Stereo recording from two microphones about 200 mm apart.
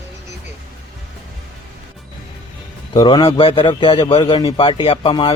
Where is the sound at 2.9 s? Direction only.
20° left (ahead or behind).